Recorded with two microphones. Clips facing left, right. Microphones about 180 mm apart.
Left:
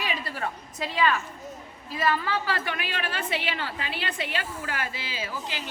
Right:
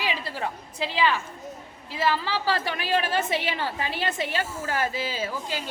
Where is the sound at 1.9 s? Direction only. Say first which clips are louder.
Right 1 dB; 25° right (ahead or behind); by 5.3 s 45° right (ahead or behind).